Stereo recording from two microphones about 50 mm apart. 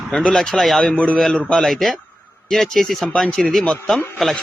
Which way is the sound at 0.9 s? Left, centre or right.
Left.